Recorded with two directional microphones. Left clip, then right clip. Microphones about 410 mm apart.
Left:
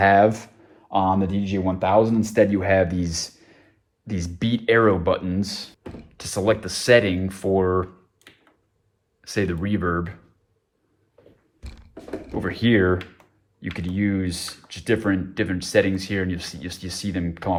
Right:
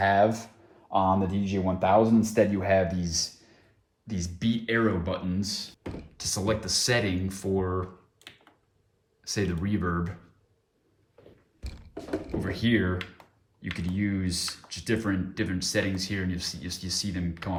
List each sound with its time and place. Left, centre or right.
0.2 s speech: left
3.0 s speech: centre
12.4 s speech: centre